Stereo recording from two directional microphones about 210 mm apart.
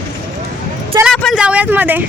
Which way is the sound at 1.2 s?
Centre (ahead or behind).